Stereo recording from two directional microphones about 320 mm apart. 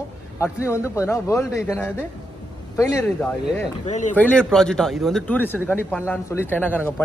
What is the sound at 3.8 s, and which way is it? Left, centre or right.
Speech, left.